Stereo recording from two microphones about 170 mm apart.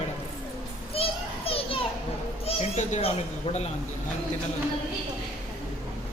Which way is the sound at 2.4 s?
40° left (ahead or behind).